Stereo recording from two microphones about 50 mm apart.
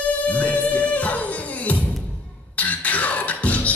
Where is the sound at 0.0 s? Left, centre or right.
Left.